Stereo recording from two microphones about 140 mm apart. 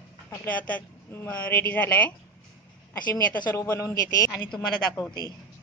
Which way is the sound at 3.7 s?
15° left (ahead or behind).